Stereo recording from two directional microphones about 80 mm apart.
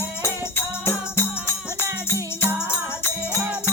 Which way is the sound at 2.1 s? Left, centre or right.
Right.